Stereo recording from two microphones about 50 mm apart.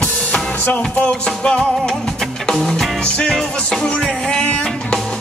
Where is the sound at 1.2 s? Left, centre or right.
Centre.